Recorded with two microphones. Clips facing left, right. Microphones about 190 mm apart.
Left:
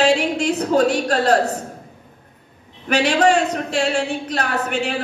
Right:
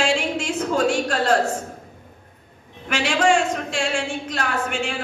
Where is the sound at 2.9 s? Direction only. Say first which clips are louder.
Left 3 dB; 40° left (ahead or behind).